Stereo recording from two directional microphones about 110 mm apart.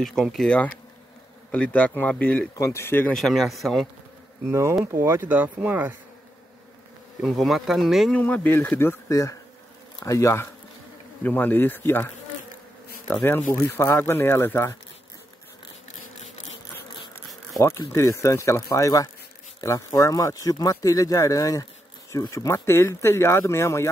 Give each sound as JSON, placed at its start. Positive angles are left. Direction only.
{"t": 0.0, "sound": "a man's voice", "side_deg": 0}
{"t": 2.5, "sound": "speech", "side_deg": 30}
{"t": 3.1, "sound": "speech", "side_deg": 5}
{"t": 4.5, "sound": "speech", "side_deg": -25}
{"t": 7.2, "sound": "speech", "side_deg": 0}
{"t": 8.2, "sound": "a man's voice", "side_deg": 15}
{"t": 13.1, "sound": "speech", "side_deg": 20}
{"t": 17.6, "sound": "speech", "side_deg": 30}